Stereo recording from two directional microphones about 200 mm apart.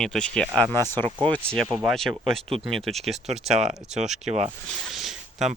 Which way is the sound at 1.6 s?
10° right (ahead or behind).